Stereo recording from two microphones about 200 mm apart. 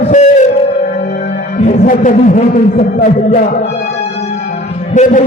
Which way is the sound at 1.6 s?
40° left (ahead or behind).